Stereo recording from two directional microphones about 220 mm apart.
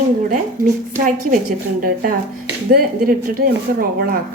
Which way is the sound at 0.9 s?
40° right (ahead or behind).